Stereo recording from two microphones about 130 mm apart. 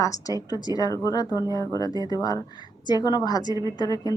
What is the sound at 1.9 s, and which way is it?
Speech, 35° right (ahead or behind).